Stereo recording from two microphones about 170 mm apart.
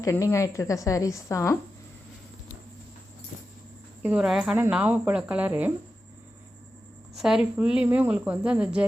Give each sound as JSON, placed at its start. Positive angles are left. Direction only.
{"t": 0.0, "sound": "a woman's voice", "side_deg": 15}
{"t": 4.0, "sound": "speech", "side_deg": -5}
{"t": 7.2, "sound": "speech", "side_deg": -5}